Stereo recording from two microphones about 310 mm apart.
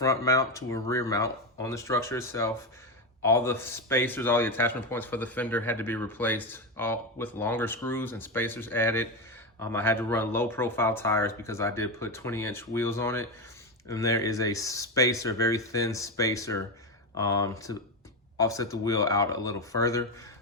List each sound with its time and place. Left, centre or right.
0.0 s speech: centre